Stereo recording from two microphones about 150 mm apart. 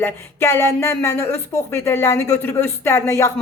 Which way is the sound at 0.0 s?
15° left (ahead or behind).